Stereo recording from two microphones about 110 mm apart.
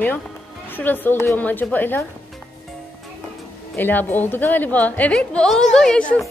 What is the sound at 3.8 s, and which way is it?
A man's voice, 15° left (ahead or behind).